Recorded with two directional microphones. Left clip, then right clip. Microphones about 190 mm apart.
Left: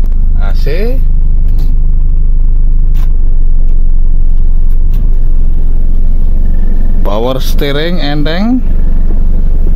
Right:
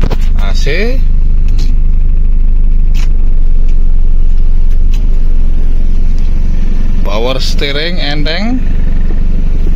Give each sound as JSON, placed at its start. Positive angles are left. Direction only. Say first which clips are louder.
{"t": 0.5, "sound": "speech", "louder": "right 2 dB", "side_deg": -5}
{"t": 7.1, "sound": "speech", "louder": "left 1 dB", "side_deg": 45}